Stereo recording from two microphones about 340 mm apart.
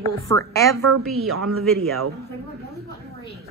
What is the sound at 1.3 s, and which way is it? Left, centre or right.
Speech, right.